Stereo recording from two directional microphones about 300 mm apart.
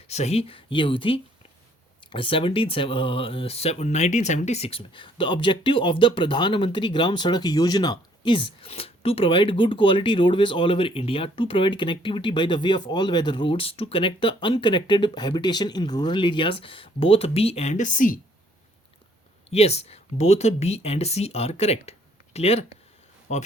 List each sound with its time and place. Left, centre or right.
0.1 s speech: left
19.5 s speech: left